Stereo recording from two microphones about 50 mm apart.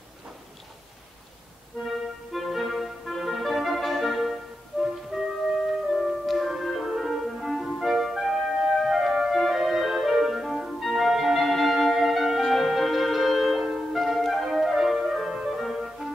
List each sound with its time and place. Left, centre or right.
2.3 s clarinet: centre
5.1 s music: centre
14.0 s flute: centre
15.4 s music: centre